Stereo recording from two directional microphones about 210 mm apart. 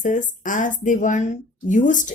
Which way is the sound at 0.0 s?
35° left (ahead or behind).